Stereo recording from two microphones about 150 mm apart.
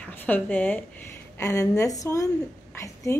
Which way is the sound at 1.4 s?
20° left (ahead or behind).